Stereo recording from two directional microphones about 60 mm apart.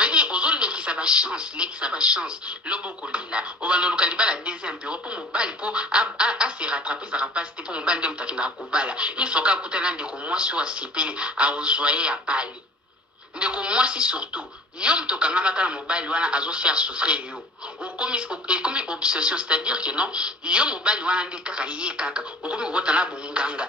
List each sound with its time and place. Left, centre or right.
0.0 s speech: centre